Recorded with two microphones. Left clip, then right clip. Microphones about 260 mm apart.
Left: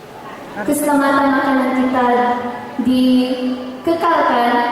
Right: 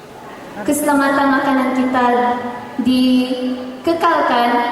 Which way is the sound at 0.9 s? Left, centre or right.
Centre.